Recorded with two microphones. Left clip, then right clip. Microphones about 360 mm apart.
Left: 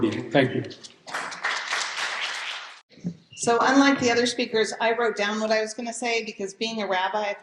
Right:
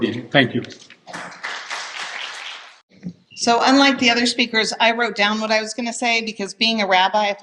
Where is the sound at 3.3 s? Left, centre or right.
Right.